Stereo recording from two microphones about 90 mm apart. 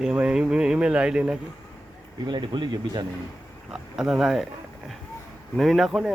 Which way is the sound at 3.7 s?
5° right (ahead or behind).